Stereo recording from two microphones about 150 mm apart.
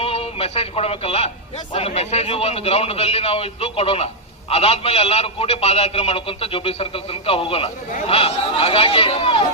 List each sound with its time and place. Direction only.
0.0 s a man's voice: 40° left (ahead or behind)